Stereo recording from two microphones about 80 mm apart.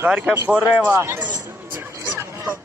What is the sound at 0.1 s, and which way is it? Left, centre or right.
Speech, centre.